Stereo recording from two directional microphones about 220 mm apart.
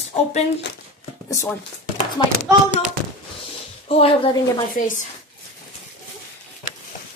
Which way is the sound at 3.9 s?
25° left (ahead or behind).